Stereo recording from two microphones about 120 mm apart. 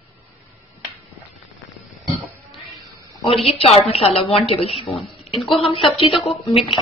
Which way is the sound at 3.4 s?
55° left (ahead or behind).